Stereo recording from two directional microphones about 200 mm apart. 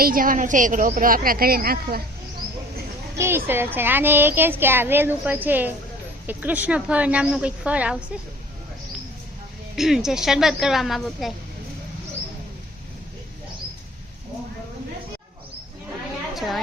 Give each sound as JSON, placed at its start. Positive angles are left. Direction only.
{"t": 0.0, "sound": "a woman's voice", "side_deg": -45}
{"t": 3.2, "sound": "speech", "side_deg": -10}
{"t": 9.7, "sound": "a woman's voice", "side_deg": 0}
{"t": 16.3, "sound": "a sound", "side_deg": 0}